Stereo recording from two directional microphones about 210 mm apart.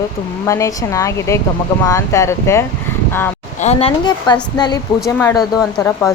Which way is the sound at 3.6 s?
25° left (ahead or behind).